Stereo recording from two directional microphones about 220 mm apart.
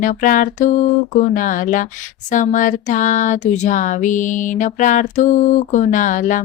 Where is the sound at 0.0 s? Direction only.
35° left (ahead or behind).